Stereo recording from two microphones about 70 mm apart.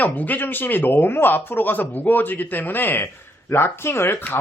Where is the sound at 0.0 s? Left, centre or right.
Left.